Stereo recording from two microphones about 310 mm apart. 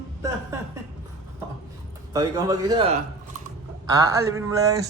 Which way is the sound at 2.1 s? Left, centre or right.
Centre.